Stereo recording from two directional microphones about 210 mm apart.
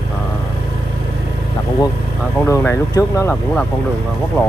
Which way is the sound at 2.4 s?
10° left (ahead or behind).